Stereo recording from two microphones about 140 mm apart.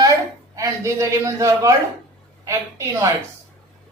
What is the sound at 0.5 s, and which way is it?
A man's voice, 25° right (ahead or behind).